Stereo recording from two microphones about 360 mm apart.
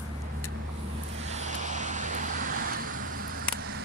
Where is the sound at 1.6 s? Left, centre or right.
Centre.